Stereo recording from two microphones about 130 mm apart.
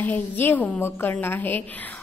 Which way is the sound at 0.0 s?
15° left (ahead or behind).